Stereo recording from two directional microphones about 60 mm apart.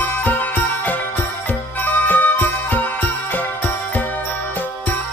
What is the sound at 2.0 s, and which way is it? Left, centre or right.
Jingle bell, left.